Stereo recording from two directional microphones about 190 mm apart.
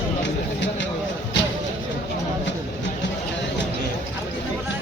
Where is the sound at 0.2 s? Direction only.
70° left (ahead or behind).